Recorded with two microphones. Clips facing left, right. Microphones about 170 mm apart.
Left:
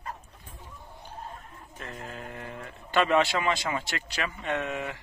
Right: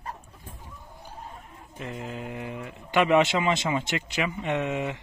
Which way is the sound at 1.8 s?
15° right (ahead or behind).